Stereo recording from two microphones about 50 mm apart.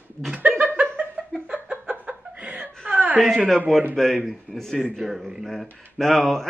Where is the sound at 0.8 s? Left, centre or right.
Centre.